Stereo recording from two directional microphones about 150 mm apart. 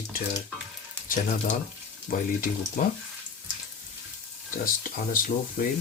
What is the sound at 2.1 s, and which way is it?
Speech, 60° left (ahead or behind).